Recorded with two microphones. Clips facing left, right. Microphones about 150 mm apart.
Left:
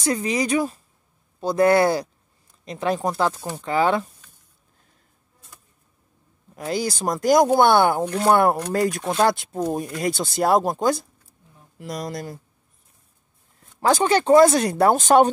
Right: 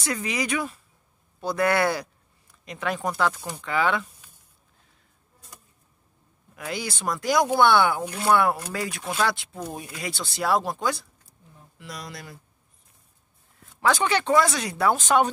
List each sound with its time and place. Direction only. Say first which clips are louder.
0.0 s speech: left 6 dB; 35° left (ahead or behind)
6.5 s speech: left 7 dB; 35° left (ahead or behind)
13.6 s speech: left 4 dB; 35° left (ahead or behind)